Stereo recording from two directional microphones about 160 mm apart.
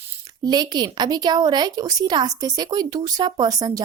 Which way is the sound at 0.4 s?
25° right (ahead or behind).